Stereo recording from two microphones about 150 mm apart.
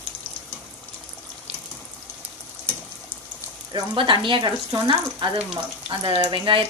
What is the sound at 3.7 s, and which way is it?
Speech, 30° right (ahead or behind).